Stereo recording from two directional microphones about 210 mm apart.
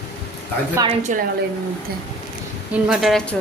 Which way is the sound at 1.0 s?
40° right (ahead or behind).